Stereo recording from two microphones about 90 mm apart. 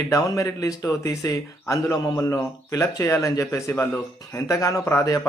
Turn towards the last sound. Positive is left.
turn(degrees=35)  # may be behind; listen again after turning